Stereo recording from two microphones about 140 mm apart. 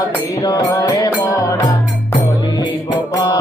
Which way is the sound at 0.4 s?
25° left (ahead or behind).